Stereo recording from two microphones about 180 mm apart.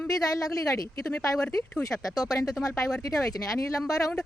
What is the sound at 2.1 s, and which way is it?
Speech, 20° left (ahead or behind).